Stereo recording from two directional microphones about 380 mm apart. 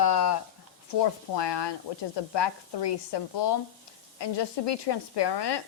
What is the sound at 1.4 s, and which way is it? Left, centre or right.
A woman's voice, left.